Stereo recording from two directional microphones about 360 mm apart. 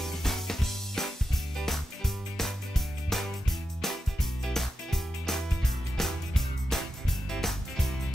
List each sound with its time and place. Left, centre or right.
0.0 s music: centre